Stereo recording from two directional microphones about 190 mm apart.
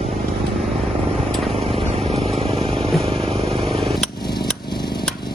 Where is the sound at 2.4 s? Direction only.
30° right (ahead or behind).